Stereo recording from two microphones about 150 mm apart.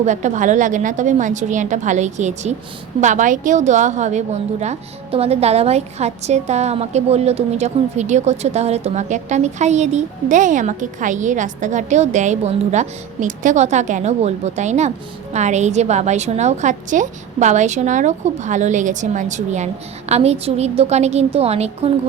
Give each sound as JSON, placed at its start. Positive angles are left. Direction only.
{"t": 0.0, "sound": "a woman's voice", "side_deg": -55}